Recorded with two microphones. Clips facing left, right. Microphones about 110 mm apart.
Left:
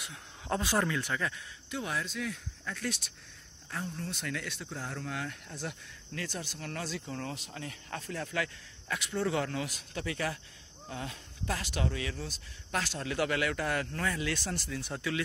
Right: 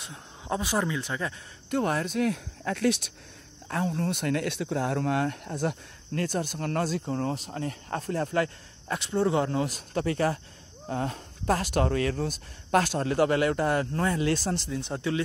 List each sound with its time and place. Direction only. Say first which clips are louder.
0.5 s speech: right 2 dB; 15° right (ahead or behind)
1.7 s speech: right 9 dB; 50° right (ahead or behind); by 3.1 s 70° right (ahead or behind)
3.6 s speech: right 10 dB; 80° right; by 15.2 s 30° right (ahead or behind)